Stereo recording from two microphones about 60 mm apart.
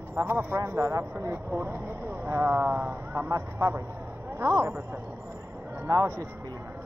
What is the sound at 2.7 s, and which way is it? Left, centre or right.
Speech, right.